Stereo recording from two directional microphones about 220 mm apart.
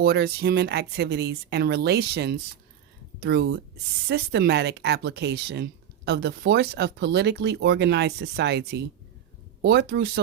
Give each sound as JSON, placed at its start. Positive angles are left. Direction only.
{"t": 0.0, "sound": "speech", "side_deg": -45}